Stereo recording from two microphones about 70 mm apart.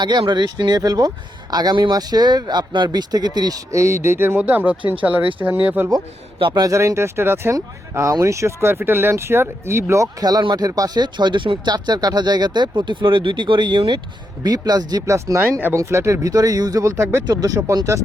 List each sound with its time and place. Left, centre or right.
0.0 s speech: right
3.7 s speech: right
4.4 s speech: right
6.5 s speech: right
9.9 s speech: right
10.2 s speech: right
14.4 s speech: right
15.0 s speech: right
16.2 s speech: right
17.2 s speech: right